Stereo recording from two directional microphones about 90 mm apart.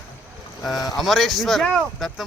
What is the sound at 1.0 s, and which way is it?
Speech, centre (ahead or behind).